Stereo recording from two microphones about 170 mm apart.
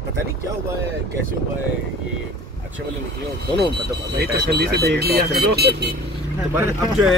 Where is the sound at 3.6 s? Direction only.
80° right.